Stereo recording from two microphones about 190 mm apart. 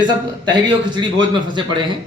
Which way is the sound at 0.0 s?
25° right (ahead or behind).